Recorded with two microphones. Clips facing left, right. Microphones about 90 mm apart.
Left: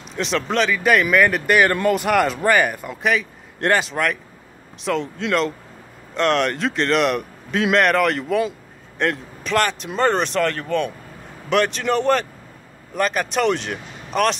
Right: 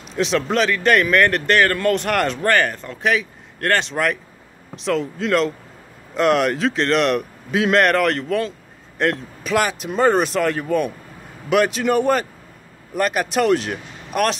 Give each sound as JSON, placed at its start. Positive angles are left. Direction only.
{"t": 0.1, "sound": "a man's voice", "side_deg": 0}